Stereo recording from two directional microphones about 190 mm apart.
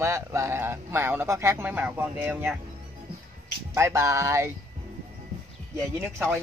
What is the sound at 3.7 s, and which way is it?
Speech, 15° right (ahead or behind).